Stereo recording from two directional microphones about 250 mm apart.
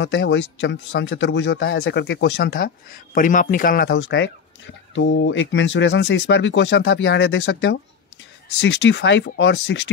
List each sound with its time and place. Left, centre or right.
0.0 s speech: left